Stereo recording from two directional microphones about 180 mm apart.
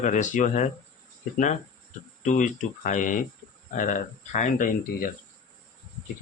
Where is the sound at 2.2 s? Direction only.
45° left (ahead or behind).